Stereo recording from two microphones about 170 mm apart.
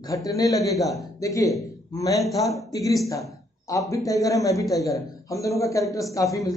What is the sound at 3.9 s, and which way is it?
Speech, 20° left (ahead or behind).